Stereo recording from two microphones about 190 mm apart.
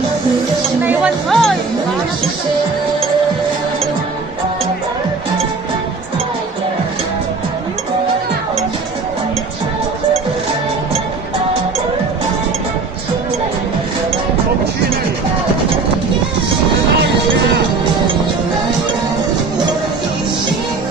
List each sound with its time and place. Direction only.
0.8 s speech: 5° right (ahead or behind)